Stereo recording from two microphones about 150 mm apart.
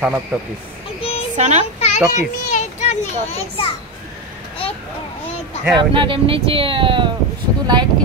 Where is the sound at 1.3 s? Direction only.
50° right (ahead or behind).